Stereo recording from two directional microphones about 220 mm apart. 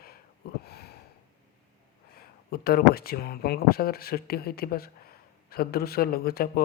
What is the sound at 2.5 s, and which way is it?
A man's voice, 45° left (ahead or behind).